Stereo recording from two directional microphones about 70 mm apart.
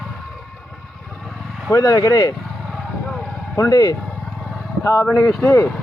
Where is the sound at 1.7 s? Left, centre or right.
Left.